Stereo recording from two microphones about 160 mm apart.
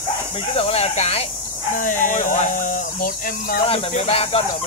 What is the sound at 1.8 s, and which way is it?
Speech, 55° left (ahead or behind).